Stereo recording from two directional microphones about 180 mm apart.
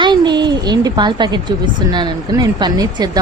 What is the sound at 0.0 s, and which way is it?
Speech, 25° right (ahead or behind).